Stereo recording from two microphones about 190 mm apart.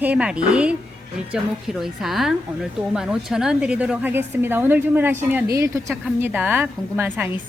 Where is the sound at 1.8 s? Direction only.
Centre (ahead or behind).